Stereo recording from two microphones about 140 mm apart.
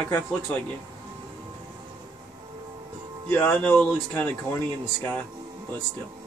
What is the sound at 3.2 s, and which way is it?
Speech, 10° left (ahead or behind).